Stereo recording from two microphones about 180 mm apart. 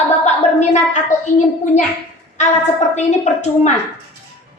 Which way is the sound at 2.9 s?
40° left (ahead or behind).